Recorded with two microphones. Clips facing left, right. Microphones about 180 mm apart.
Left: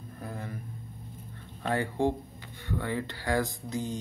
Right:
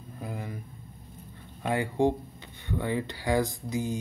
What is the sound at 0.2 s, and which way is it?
Vehicle, 15° right (ahead or behind).